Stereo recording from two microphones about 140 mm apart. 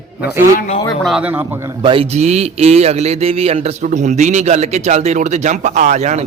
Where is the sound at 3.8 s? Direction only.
60° right (ahead or behind).